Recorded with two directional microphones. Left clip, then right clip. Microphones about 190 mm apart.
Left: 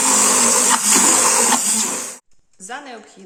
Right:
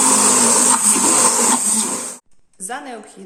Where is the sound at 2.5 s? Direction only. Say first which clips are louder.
Right 3 dB; 5° left (ahead or behind).